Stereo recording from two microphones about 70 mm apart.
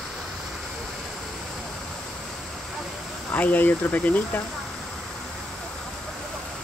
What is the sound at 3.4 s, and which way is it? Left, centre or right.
Speech, left.